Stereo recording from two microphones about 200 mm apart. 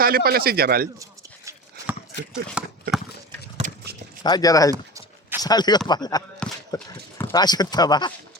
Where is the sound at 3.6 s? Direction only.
35° right (ahead or behind).